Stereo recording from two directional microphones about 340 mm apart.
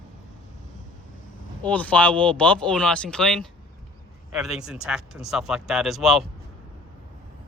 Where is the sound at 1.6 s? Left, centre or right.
Centre.